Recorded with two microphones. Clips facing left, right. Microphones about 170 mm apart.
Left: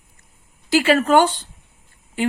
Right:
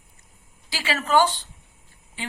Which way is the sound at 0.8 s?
50° left (ahead or behind).